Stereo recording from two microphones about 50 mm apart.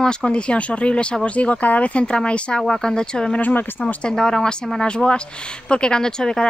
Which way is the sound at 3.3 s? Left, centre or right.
Left.